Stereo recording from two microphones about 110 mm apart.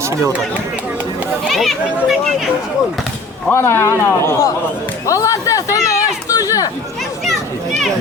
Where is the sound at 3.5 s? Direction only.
20° left (ahead or behind).